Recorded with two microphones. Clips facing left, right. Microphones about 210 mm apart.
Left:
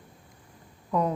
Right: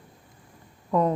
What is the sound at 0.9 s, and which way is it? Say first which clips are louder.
Speech: right 3 dB; centre (ahead or behind).